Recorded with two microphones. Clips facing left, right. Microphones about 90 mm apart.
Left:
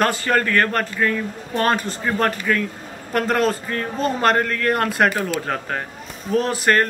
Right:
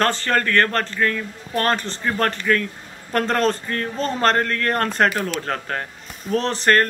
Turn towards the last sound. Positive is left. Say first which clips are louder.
# even
turn(degrees=10)  # may be behind; listen again after turning